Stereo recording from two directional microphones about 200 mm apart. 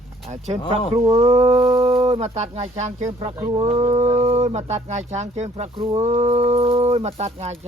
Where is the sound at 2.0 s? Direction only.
30° right (ahead or behind).